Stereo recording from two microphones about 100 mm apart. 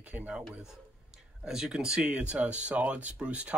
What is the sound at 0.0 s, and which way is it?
Speech, 15° right (ahead or behind).